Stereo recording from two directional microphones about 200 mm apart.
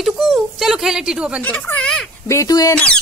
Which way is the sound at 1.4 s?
10° left (ahead or behind).